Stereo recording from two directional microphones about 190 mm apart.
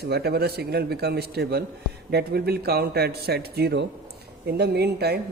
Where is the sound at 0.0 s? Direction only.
55° right (ahead or behind).